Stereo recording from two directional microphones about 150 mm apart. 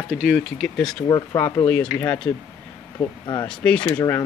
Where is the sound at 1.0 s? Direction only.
25° left (ahead or behind).